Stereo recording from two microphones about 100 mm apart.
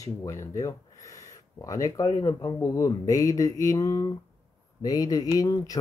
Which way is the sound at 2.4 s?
35° left (ahead or behind).